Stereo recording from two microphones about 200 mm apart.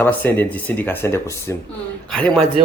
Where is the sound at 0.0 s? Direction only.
10° left (ahead or behind).